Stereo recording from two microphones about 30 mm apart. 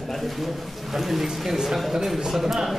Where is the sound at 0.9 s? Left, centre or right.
Centre.